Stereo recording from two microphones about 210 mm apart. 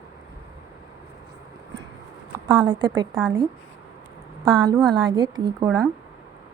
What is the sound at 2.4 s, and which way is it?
Speech, 20° right (ahead or behind).